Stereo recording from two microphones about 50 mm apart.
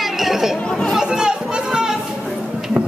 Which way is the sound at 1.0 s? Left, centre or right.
Centre.